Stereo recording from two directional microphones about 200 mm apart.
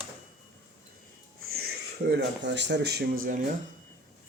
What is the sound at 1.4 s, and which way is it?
Speech, 50° right (ahead or behind).